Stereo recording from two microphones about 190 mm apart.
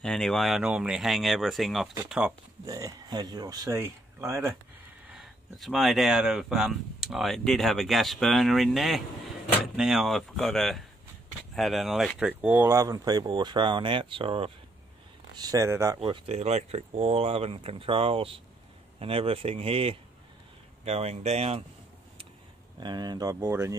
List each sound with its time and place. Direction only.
0.0 s speech: 5° left (ahead or behind)
2.6 s speech: 20° right (ahead or behind)
5.1 s speech: centre (ahead or behind)
16.0 s speech: 30° right (ahead or behind)
22.8 s speech: 20° right (ahead or behind)